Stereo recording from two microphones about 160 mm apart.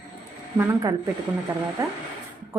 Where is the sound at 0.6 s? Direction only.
20° right (ahead or behind).